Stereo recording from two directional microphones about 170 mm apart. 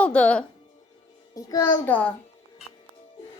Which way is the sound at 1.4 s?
20° left (ahead or behind).